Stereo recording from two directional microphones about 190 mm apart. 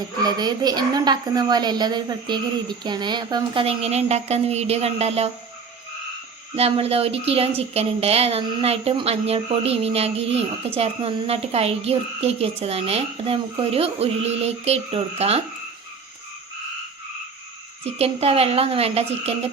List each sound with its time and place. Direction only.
0.2 s a woman's voice: 20° right (ahead or behind)
6.6 s speech: 30° right (ahead or behind)
17.9 s speech: 30° right (ahead or behind)